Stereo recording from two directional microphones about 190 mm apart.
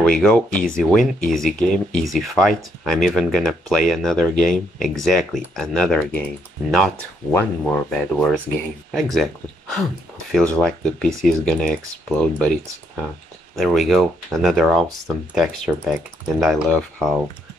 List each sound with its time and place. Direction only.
0.0 s speech: 5° left (ahead or behind)
0.5 s speech: 45° left (ahead or behind)
0.7 s speech: centre (ahead or behind)
7.3 s speech: 10° left (ahead or behind)
10.3 s speech: 5° left (ahead or behind)